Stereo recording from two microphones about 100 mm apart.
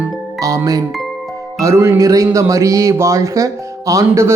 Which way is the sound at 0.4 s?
35° right (ahead or behind).